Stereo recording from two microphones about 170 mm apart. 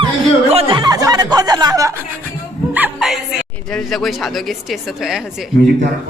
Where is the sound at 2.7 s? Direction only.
5° right (ahead or behind).